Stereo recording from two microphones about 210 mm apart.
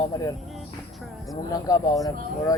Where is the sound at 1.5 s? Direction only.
15° left (ahead or behind).